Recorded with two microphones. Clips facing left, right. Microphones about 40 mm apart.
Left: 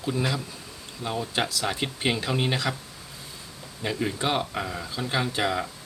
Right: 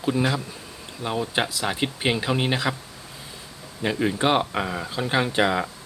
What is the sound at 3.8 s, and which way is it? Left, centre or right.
Speech, centre.